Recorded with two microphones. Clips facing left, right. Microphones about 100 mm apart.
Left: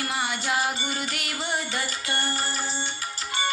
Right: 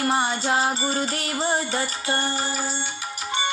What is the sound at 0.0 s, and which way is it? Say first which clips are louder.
Music: right 6 dB; 30° right (ahead or behind).